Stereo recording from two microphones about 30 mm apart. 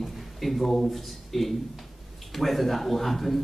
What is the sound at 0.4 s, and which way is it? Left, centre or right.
Speech, centre.